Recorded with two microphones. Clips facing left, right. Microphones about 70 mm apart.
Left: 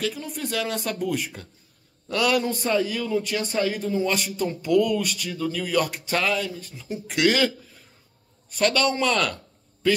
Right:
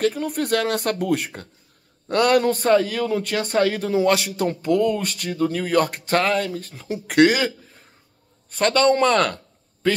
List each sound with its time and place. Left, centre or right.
0.0 s a man's voice: right
4.6 s speech: right
7.2 s a man's voice: right
8.5 s a man's voice: right